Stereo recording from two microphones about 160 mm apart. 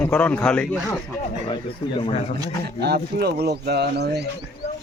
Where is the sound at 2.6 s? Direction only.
90° right.